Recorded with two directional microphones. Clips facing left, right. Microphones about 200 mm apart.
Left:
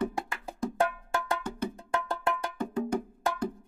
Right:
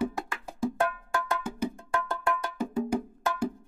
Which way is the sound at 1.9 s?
25° left (ahead or behind).